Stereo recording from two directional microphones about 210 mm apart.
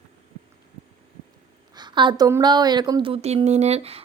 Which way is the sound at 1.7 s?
20° right (ahead or behind).